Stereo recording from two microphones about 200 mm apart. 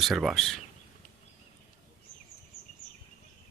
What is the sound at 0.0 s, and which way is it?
Speech, centre (ahead or behind).